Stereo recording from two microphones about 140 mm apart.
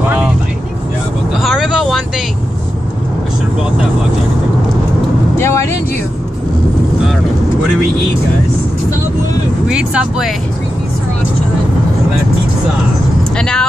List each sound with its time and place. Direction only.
1.4 s vehicle: centre (ahead or behind)
5.4 s speech: 20° left (ahead or behind)
9.7 s speech: 5° right (ahead or behind)
13.4 s speech: 5° left (ahead or behind)